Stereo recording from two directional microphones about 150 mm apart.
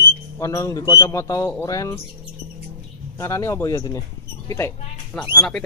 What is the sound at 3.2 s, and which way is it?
A man's voice, 20° left (ahead or behind).